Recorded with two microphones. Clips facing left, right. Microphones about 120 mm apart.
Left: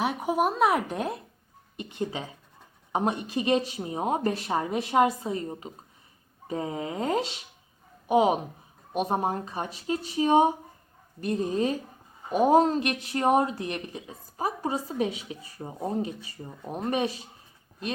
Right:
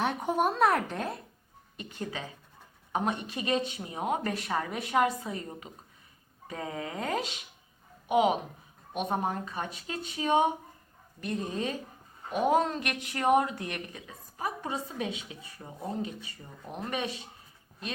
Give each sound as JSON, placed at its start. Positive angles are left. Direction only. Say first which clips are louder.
{"t": 0.0, "sound": "a woman's voice", "louder": "left 2 dB", "side_deg": 5}